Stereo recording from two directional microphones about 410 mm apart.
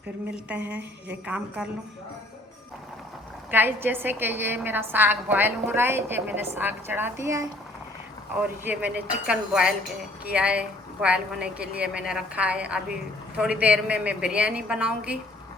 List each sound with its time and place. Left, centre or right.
0.8 s a woman's voice: right
1.6 s a woman's voice: centre
3.5 s a woman's voice: centre